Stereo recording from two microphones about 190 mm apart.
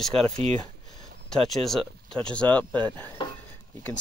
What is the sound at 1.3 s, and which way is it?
Speech, centre (ahead or behind).